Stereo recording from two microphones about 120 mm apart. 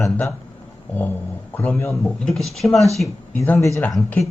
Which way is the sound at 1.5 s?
15° left (ahead or behind).